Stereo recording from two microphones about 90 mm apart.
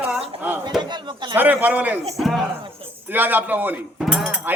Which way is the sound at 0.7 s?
Centre (ahead or behind).